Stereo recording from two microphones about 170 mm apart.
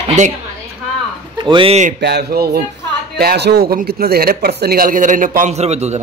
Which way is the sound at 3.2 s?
70° right (ahead or behind).